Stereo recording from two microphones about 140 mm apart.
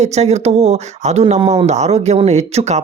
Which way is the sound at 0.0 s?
50° right (ahead or behind).